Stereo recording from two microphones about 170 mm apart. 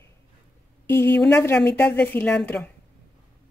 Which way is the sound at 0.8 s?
10° left (ahead or behind).